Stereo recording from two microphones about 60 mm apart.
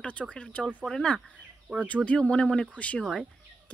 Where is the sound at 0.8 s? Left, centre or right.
Centre.